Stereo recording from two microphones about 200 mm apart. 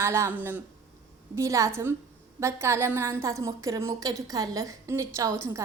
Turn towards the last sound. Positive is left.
turn(degrees=-15)  # may be behind; listen again after turning